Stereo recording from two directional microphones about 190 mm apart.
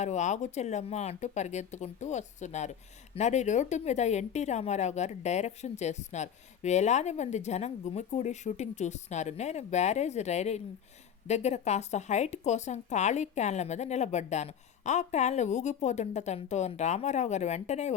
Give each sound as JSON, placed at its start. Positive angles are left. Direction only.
{"t": 0.0, "sound": "speech", "side_deg": 40}